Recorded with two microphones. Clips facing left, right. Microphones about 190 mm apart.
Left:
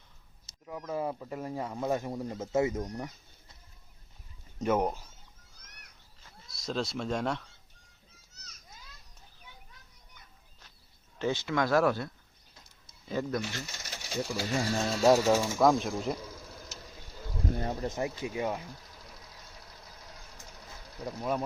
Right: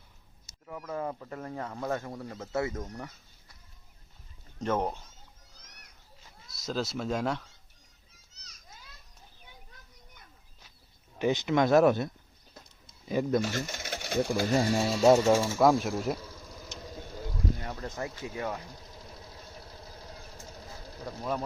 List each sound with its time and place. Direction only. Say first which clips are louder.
0.7 s speech: left 1 dB; 10° left (ahead or behind)
4.6 s speech: left 2 dB; 10° left (ahead or behind)
6.5 s speech: right 1 dB; centre (ahead or behind)
11.2 s speech: right 4 dB; 15° right (ahead or behind)
13.4 s speech: right 6 dB; 45° right (ahead or behind)
14.7 s speech: right 1 dB; 5° right (ahead or behind)
16.5 s vehicle: right 1 dB; 5° left (ahead or behind)
17.6 s speech: left 4 dB; 25° left (ahead or behind)
19.2 s vehicle: right 5 dB; 30° right (ahead or behind)